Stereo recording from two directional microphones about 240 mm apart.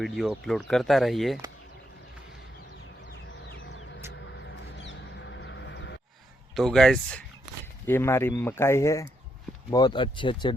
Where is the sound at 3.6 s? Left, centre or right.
Left.